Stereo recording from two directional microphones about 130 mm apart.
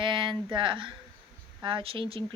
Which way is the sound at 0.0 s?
40° right (ahead or behind).